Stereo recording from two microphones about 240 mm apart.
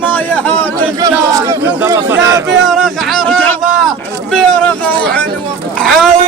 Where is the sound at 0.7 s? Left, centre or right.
Centre.